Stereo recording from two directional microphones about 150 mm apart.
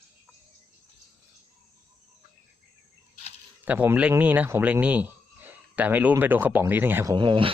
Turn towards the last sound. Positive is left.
turn(degrees=-30)  # may be behind; listen again after turning